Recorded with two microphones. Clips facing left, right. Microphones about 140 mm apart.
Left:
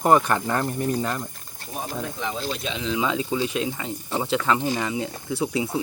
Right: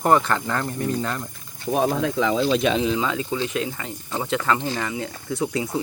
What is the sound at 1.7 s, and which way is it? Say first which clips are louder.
Speech: right 10 dB; 90° right.